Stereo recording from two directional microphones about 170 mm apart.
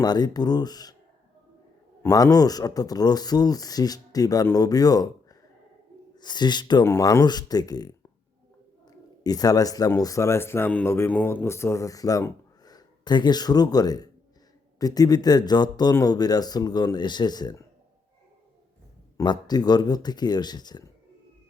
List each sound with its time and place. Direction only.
0.0 s speech: 25° left (ahead or behind)
2.0 s speech: 20° left (ahead or behind)
19.1 s speech: 25° left (ahead or behind)